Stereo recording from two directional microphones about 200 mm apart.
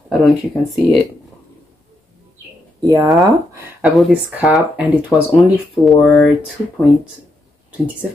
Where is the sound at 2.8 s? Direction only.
15° right (ahead or behind).